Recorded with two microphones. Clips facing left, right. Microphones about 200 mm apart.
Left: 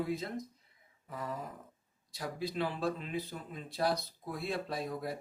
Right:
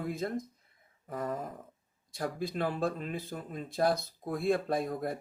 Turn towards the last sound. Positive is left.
turn(degrees=-50)  # may be behind; listen again after turning